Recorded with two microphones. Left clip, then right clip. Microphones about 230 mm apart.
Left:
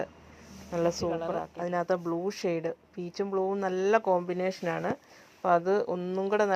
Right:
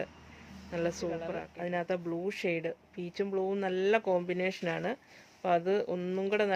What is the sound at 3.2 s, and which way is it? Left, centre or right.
Speech, centre.